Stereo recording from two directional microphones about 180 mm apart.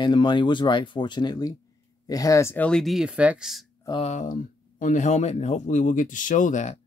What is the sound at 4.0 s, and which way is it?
Speech, 40° left (ahead or behind).